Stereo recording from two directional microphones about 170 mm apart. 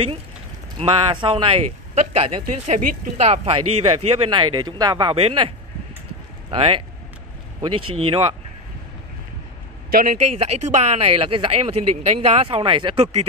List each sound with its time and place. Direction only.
0.7 s speech: 30° right (ahead or behind)
6.5 s speech: 35° right (ahead or behind)
9.8 s speech: 60° right (ahead or behind)
10.2 s speech: 40° right (ahead or behind)